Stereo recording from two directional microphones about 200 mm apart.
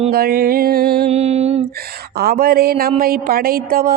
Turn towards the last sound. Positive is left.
turn(degrees=-45)  # may be behind; listen again after turning